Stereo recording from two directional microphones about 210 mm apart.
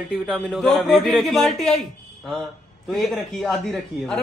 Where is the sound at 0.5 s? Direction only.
Centre (ahead or behind).